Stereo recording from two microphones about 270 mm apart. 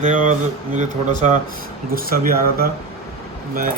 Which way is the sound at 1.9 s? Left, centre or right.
Right.